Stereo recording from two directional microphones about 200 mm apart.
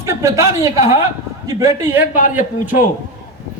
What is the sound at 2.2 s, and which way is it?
Speech, 40° left (ahead or behind).